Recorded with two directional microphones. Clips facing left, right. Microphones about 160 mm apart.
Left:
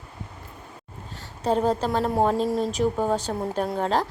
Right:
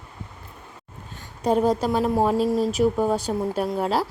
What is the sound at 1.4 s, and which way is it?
Speech, 10° right (ahead or behind).